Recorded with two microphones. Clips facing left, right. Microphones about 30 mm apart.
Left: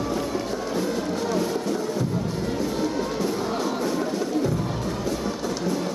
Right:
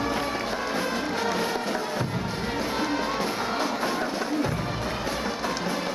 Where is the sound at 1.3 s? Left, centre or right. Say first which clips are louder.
Left 2 dB; right.